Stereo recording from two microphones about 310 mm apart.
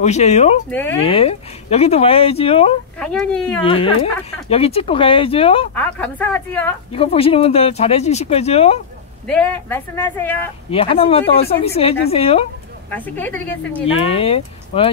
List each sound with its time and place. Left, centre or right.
0.0 s speech: left
0.7 s speech: centre
1.0 s speech: centre
3.0 s speech: centre
3.6 s speech: centre
5.8 s speech: centre
6.9 s speech: centre
9.3 s speech: centre
10.7 s speech: centre
12.9 s speech: centre
14.1 s speech: centre